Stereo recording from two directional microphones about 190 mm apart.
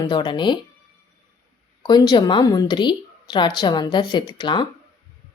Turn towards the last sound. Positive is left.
turn(degrees=25)  # may be behind; listen again after turning